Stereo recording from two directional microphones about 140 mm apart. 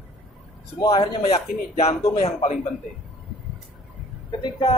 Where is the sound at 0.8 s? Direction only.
30° left (ahead or behind).